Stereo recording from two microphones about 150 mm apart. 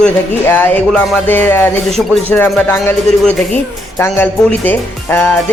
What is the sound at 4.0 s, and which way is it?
A man's voice, 15° left (ahead or behind).